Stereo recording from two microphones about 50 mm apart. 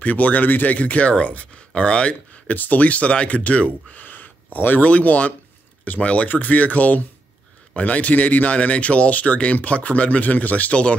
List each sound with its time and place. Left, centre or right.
0.0 s speech: left
2.5 s speech: left
6.2 s speech: left